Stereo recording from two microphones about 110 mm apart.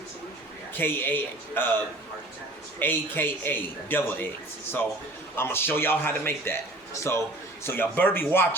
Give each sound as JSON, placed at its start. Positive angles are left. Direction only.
{"t": 0.7, "sound": "a man's voice", "side_deg": 20}
{"t": 5.4, "sound": "a man's voice", "side_deg": 20}